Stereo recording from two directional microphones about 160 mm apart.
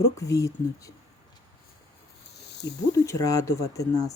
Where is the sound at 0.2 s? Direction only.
20° left (ahead or behind).